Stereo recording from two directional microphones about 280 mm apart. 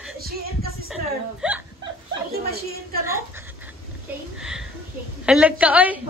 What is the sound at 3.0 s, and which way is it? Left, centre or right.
Speech, centre.